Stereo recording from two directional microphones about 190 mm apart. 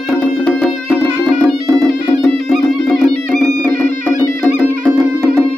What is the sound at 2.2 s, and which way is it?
Music, centre (ahead or behind).